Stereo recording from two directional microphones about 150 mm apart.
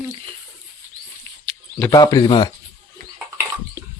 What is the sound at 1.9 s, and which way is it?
Speech, 25° left (ahead or behind).